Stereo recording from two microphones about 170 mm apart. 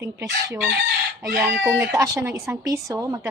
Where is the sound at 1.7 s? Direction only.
20° right (ahead or behind).